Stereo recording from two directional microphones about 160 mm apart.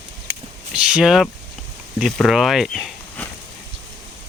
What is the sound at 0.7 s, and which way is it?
Speech, 5° right (ahead or behind).